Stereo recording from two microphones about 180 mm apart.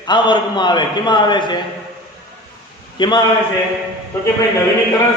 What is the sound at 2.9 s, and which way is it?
Speech, 25° left (ahead or behind).